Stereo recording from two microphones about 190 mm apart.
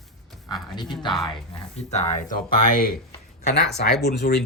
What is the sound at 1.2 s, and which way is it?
Speech, 30° left (ahead or behind).